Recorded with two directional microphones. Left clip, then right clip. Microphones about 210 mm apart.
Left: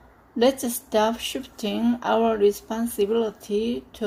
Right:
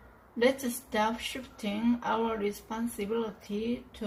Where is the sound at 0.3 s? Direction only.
50° left (ahead or behind).